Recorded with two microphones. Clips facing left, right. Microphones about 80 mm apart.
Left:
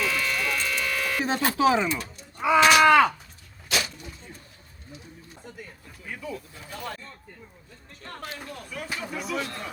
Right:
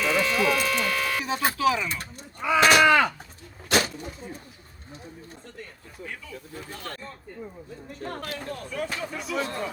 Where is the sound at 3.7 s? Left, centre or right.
Right.